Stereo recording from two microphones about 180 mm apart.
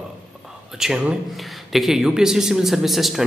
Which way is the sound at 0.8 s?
5° right (ahead or behind).